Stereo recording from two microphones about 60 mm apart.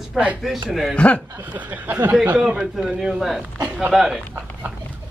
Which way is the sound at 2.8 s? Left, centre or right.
Centre.